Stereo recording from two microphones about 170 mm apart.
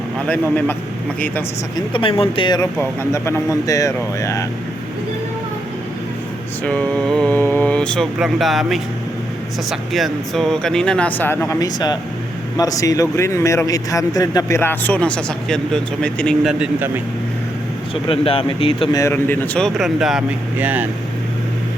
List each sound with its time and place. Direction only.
0.3 s speech: 10° left (ahead or behind)
1.7 s speech: 30° left (ahead or behind)
3.0 s speech: 15° left (ahead or behind)
6.7 s speech: 5° left (ahead or behind)
18.1 s speech: 35° left (ahead or behind)
18.9 s speech: 15° left (ahead or behind); by 20.8 s 10° right (ahead or behind)